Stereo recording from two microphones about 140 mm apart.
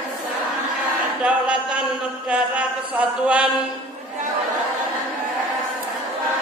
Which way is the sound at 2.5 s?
10° right (ahead or behind).